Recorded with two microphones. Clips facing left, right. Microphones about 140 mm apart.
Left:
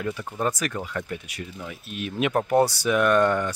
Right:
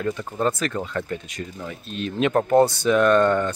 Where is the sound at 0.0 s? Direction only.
10° left (ahead or behind).